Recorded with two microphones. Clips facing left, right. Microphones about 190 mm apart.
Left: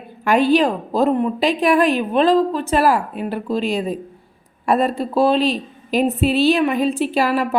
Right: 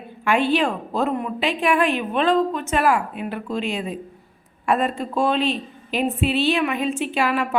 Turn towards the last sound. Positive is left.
turn(degrees=35)  # may be behind; listen again after turning